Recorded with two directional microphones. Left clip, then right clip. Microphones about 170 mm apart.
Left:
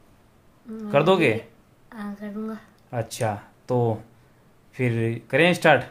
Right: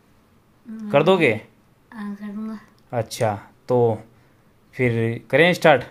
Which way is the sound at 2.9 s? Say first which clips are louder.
Right 4 dB; 20° right (ahead or behind).